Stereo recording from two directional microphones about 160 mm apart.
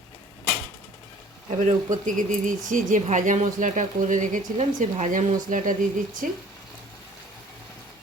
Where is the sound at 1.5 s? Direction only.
50° right (ahead or behind).